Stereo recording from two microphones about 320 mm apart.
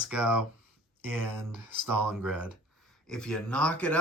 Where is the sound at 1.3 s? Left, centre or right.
Right.